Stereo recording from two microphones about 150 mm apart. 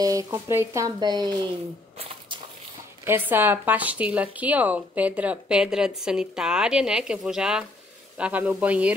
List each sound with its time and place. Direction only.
0.0 s speech: 20° right (ahead or behind)
2.0 s squish: 35° right (ahead or behind)
3.1 s speech: 15° right (ahead or behind)